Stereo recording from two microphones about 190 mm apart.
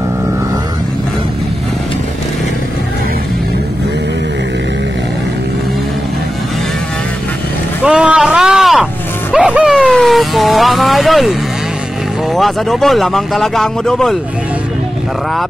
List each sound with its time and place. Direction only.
7.8 s a sound: 5° right (ahead or behind)
9.3 s vehicle: 5° right (ahead or behind)
12.4 s speech: centre (ahead or behind)